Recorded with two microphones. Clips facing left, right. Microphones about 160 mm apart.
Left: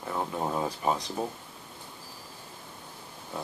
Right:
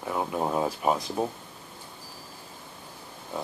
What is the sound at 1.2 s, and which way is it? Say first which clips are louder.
Speech: right 4 dB; 10° right (ahead or behind).